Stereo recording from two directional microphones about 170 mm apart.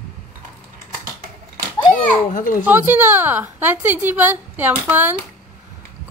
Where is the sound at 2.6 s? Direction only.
10° right (ahead or behind).